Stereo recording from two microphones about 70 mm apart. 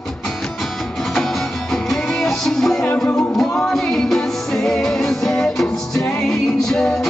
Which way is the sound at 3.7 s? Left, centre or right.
Centre.